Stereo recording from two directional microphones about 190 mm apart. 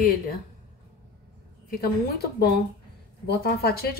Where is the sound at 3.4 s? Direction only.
55° left (ahead or behind).